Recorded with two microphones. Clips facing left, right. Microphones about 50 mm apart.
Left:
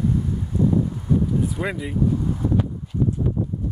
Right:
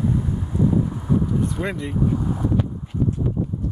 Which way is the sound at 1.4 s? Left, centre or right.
Centre.